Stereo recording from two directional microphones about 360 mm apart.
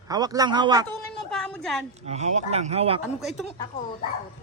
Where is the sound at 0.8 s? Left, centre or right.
Centre.